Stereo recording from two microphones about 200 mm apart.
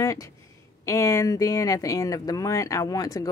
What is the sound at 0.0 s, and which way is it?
Speech, 15° left (ahead or behind).